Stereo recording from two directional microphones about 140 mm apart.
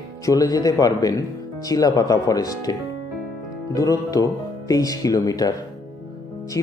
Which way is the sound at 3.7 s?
25° left (ahead or behind).